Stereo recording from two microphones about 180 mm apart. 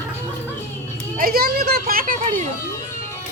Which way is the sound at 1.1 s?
55° right (ahead or behind).